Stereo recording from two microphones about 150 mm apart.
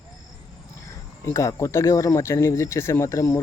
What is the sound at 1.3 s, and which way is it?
Speech, 20° left (ahead or behind).